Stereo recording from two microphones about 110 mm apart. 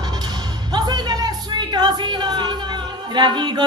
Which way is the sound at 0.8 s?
40° right (ahead or behind).